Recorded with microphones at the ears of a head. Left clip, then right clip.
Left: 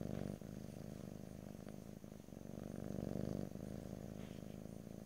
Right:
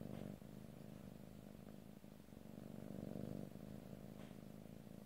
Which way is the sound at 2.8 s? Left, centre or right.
Left.